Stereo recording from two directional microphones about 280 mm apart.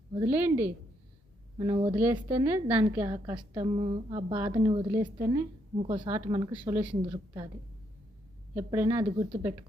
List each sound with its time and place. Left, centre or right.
0.1 s a woman's voice: centre
8.5 s a woman's voice: centre